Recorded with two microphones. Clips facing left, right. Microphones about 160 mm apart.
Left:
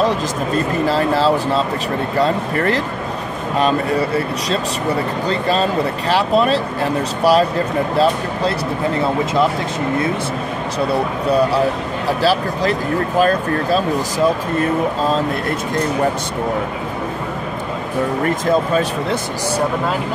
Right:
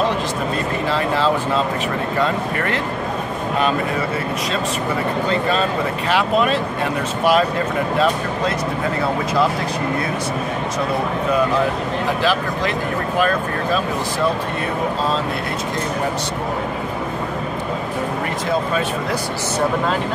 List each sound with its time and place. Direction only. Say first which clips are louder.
0.8 s speech: left 3 dB; 40° left (ahead or behind)
5.3 s speech: left 4 dB; 35° left (ahead or behind)
11.2 s speech: left 3 dB; 35° left (ahead or behind)